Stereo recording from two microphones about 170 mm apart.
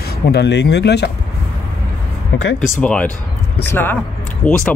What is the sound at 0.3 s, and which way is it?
Speech, 80° left.